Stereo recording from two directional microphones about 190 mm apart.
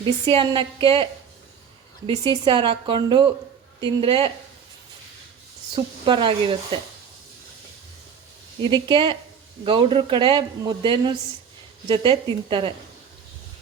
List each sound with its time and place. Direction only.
0.0 s speech: 30° right (ahead or behind)
2.4 s speech: 25° right (ahead or behind)
5.7 s speech: 25° right (ahead or behind)
8.7 s speech: 25° right (ahead or behind)